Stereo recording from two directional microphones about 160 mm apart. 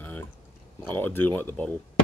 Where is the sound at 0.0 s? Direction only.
10° left (ahead or behind).